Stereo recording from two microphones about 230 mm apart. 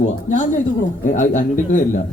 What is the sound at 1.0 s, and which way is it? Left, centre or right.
Speech, left.